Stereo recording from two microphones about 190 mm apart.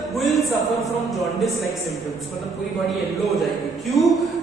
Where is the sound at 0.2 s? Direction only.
Centre (ahead or behind).